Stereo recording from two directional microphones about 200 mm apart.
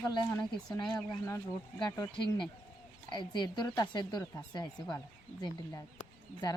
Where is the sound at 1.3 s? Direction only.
15° left (ahead or behind).